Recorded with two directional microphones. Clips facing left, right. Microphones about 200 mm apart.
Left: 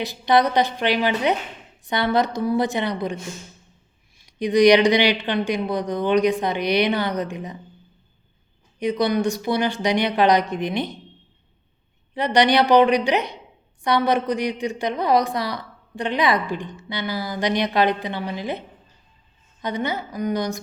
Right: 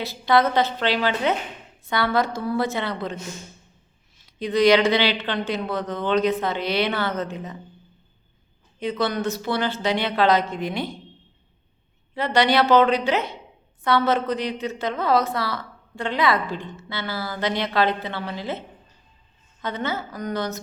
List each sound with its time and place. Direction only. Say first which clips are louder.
0.0 s a woman's voice: left 1 dB; 15° left (ahead or behind)
4.2 s a woman's voice: left 3 dB; 15° left (ahead or behind)
8.8 s a woman's voice: left 4 dB; 15° left (ahead or behind)
12.1 s a woman's voice: left 2 dB; 15° left (ahead or behind)
19.6 s a woman's voice: left 2 dB; 15° left (ahead or behind)